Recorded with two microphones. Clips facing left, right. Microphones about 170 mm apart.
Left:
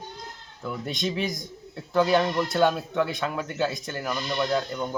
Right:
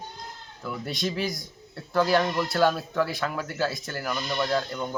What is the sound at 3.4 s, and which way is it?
Speech, 5° right (ahead or behind).